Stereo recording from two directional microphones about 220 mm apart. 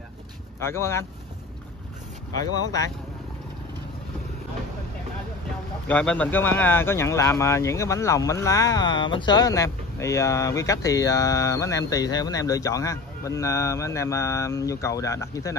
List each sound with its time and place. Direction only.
0.7 s speech: 10° left (ahead or behind)
2.3 s speech: 15° left (ahead or behind)
5.9 s speech: 5° left (ahead or behind)